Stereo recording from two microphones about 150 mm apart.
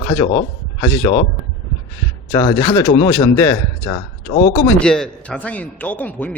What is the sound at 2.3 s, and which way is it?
Speech, 25° left (ahead or behind).